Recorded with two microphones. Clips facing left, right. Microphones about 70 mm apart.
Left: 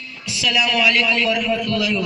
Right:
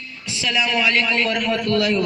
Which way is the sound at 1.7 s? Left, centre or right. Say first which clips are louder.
Right 2 dB; right.